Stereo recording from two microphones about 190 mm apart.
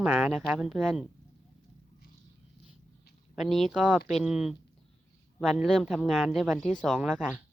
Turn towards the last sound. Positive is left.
turn(degrees=-5)  # may be behind; listen again after turning